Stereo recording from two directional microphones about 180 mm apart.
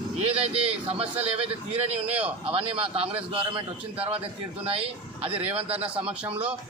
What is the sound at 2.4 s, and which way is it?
Speech, 30° right (ahead or behind).